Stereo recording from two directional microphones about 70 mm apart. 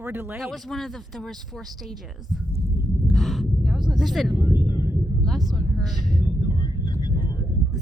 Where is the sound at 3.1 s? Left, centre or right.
Centre.